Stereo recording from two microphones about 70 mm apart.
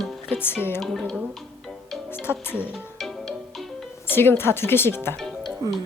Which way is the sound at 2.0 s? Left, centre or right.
Left.